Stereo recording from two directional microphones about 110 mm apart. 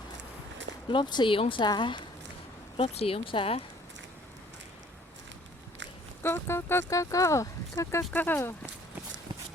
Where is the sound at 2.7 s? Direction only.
65° left (ahead or behind).